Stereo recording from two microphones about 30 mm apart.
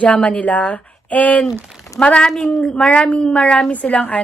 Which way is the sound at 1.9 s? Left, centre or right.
Left.